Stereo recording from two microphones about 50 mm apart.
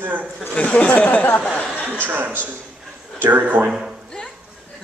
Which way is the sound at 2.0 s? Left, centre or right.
Right.